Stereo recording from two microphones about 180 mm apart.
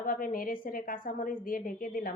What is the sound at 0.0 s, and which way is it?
A woman's voice, 50° left (ahead or behind).